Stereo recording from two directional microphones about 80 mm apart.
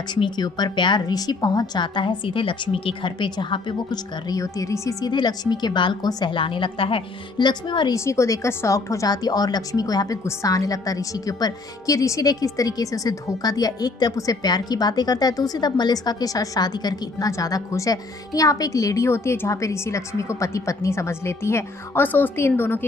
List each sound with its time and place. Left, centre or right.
0.1 s a woman's voice: left
4.3 s a woman's voice: left
5.0 s a woman's voice: left
6.0 s a woman's voice: left
6.3 s a woman's voice: left
7.3 s a woman's voice: left
7.9 s a woman's voice: left